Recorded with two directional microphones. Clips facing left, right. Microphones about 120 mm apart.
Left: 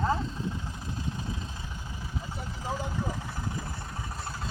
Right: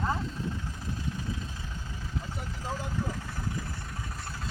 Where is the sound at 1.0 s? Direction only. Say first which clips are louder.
Left 1 dB; 25° left (ahead or behind).